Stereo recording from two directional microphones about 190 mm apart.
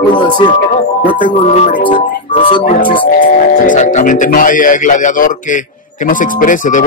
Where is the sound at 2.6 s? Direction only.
45° left (ahead or behind).